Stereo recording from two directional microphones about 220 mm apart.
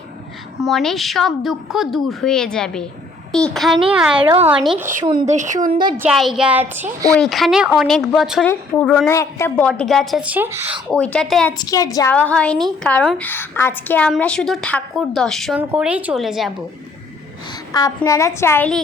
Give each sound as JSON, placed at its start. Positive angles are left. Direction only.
{"t": 0.6, "sound": "a woman's voice", "side_deg": 0}
{"t": 4.2, "sound": "a woman's voice", "side_deg": -20}
{"t": 4.4, "sound": "a woman's voice", "side_deg": -5}
{"t": 5.3, "sound": "a woman's voice", "side_deg": -35}
{"t": 6.0, "sound": "a woman's voice", "side_deg": 0}
{"t": 7.2, "sound": "a woman's voice", "side_deg": 0}
{"t": 11.5, "sound": "a woman's voice", "side_deg": 15}
{"t": 17.7, "sound": "a woman's voice", "side_deg": 15}